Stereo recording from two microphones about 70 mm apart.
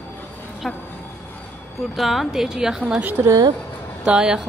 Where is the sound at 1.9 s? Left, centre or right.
Centre.